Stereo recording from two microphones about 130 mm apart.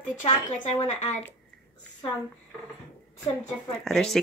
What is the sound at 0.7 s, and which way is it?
Speech, 55° left (ahead or behind).